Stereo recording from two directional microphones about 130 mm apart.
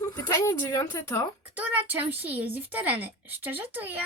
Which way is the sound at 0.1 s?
25° left (ahead or behind).